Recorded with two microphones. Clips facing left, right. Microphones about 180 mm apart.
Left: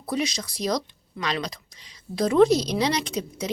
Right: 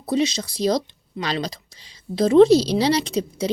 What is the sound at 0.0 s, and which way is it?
Speech, 25° right (ahead or behind).